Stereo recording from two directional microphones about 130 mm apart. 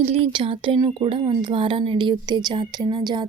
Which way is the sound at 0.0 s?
50° right (ahead or behind).